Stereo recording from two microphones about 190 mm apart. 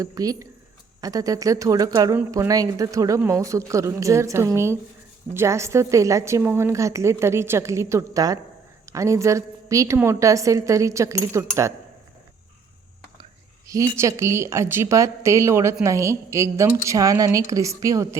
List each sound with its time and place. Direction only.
0.0 s speech: 20° right (ahead or behind)
13.7 s speech: 15° right (ahead or behind)